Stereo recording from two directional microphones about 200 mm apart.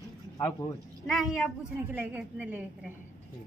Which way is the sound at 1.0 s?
Centre (ahead or behind).